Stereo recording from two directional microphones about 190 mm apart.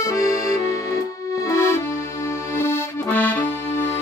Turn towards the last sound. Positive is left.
turn(degrees=10)  # may be behind; listen again after turning